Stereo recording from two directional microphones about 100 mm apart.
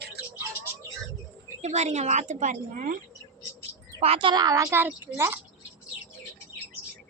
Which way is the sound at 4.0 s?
70° right (ahead or behind).